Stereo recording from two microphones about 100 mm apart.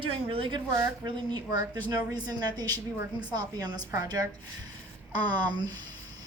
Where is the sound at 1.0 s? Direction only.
45° right (ahead or behind).